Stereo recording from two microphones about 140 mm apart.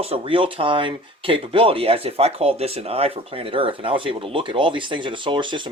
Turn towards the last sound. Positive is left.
turn(degrees=-35)  # may be behind; listen again after turning